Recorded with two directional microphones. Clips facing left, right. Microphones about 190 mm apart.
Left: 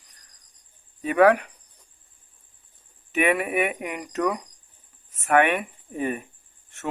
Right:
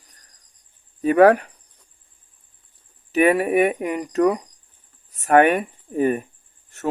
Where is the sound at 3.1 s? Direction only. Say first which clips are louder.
Right 6 dB; 40° right (ahead or behind).